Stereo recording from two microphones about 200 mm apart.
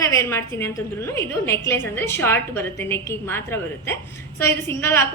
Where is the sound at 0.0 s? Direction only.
15° left (ahead or behind).